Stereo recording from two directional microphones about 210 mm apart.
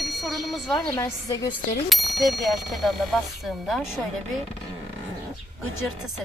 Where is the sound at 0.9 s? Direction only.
15° left (ahead or behind).